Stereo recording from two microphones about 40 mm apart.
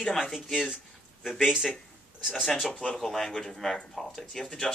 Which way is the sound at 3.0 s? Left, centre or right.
Centre.